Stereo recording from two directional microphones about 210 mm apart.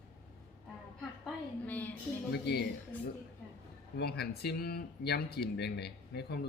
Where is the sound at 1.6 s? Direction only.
10° left (ahead or behind).